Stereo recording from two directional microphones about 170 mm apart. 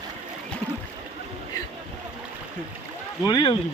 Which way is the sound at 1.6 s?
20° left (ahead or behind).